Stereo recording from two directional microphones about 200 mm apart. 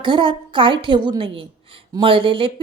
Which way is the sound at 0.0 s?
25° right (ahead or behind).